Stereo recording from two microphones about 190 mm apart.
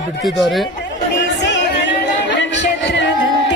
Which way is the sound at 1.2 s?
70° left (ahead or behind).